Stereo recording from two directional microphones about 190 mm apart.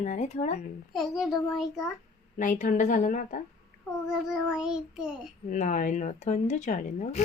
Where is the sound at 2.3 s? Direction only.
40° left (ahead or behind).